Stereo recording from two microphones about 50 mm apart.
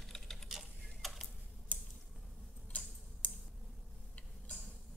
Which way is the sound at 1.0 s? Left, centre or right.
Centre.